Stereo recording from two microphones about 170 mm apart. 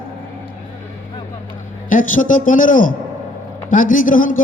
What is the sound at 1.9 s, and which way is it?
A man's voice, 50° left (ahead or behind).